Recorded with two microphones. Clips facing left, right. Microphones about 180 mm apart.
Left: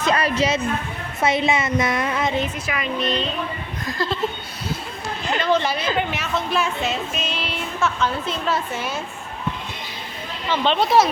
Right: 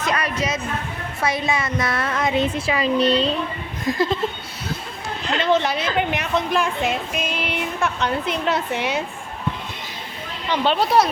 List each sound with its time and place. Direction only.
0.0 s a sound: 30° left (ahead or behind)
1.2 s a woman's voice: 25° left (ahead or behind)
2.6 s speech: 30° right (ahead or behind)
3.8 s speech: 20° right (ahead or behind)
5.4 s speech: 20° right (ahead or behind)
8.7 s a woman's voice: 70° right (ahead or behind)
10.5 s speech: 10° right (ahead or behind)